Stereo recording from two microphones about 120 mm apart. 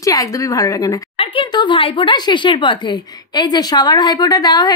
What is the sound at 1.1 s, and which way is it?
Speech, 50° left (ahead or behind).